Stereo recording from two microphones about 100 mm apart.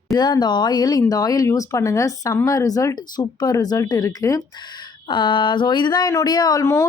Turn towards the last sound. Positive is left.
turn(degrees=40)  # may be behind; listen again after turning